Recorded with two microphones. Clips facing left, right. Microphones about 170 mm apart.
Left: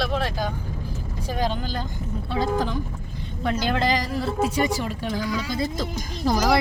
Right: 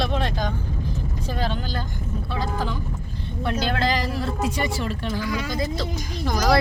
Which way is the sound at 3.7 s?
20° left (ahead or behind).